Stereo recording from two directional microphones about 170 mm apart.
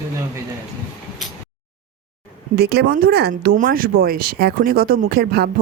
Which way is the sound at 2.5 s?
70° right (ahead or behind).